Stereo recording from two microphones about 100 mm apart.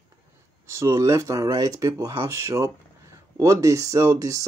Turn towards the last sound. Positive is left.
turn(degrees=-35)  # may be behind; listen again after turning